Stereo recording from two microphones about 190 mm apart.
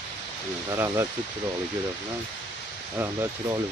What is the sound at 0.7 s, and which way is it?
Speech, 15° right (ahead or behind).